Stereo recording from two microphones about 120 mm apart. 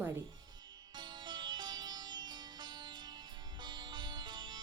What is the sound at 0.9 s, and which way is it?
Music, 40° right (ahead or behind).